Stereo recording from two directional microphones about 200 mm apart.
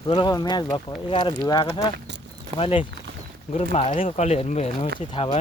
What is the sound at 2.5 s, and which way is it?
Speech, 25° left (ahead or behind).